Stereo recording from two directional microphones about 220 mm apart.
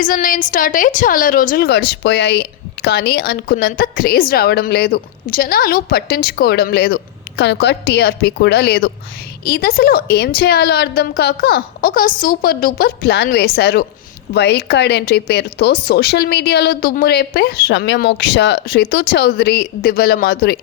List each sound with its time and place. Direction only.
0.0 s a woman's voice: 40° left (ahead or behind)